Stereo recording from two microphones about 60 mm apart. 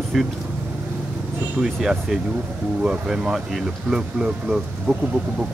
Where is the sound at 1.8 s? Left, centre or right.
Centre.